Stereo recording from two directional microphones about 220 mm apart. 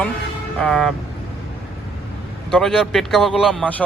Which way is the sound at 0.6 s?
5° left (ahead or behind).